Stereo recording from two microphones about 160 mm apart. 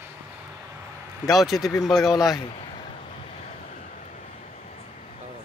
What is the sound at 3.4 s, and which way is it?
Vehicle, 45° left (ahead or behind).